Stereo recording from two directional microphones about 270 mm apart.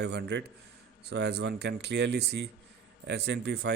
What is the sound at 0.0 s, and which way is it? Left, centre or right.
Speech, right.